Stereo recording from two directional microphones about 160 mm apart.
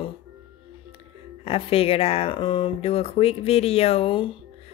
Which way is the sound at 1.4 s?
35° left (ahead or behind).